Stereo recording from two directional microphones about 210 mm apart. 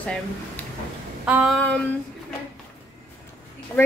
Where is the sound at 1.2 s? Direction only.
5° right (ahead or behind).